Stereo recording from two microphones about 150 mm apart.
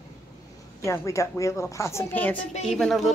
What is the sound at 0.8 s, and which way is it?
A woman's voice, 20° left (ahead or behind).